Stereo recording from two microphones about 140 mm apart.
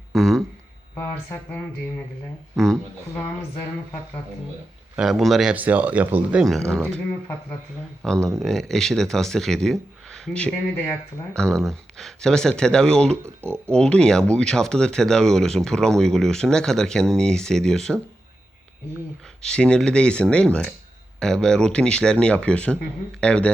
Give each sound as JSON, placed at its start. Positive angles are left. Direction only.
{"t": 0.1, "sound": "a sound", "side_deg": 0}
{"t": 0.9, "sound": "speech", "side_deg": 10}
{"t": 4.9, "sound": "speech", "side_deg": 0}
{"t": 6.7, "sound": "speech", "side_deg": 5}
{"t": 8.0, "sound": "speech", "side_deg": 5}
{"t": 13.2, "sound": "speech", "side_deg": -15}
{"t": 13.7, "sound": "speech", "side_deg": 5}
{"t": 19.4, "sound": "speech", "side_deg": 5}